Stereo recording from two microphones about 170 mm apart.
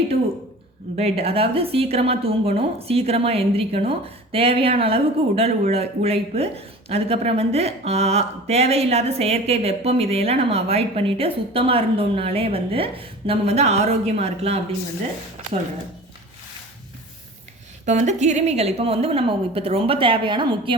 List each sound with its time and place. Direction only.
0.9 s a woman's voice: 35° right (ahead or behind)
17.8 s a woman's voice: 45° right (ahead or behind); by 20.7 s 30° right (ahead or behind)